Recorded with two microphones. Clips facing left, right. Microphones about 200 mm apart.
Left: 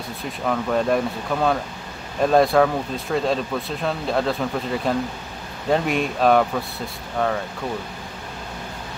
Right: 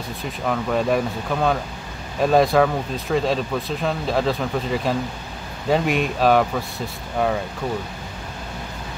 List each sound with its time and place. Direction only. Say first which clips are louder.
0.5 s speech: even; 5° right (ahead or behind)